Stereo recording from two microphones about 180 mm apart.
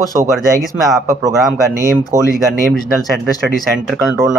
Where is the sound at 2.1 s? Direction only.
15° right (ahead or behind).